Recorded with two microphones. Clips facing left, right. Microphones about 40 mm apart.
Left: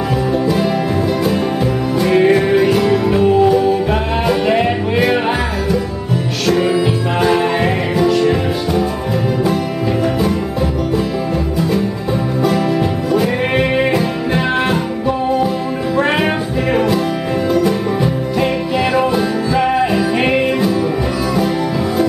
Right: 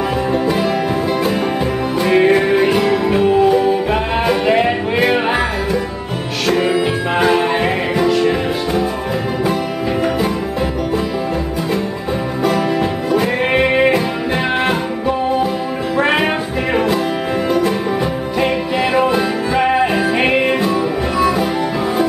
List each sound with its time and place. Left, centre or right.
0.3 s music: centre
2.0 s music: centre
6.4 s music: centre
13.1 s music: centre
18.4 s music: centre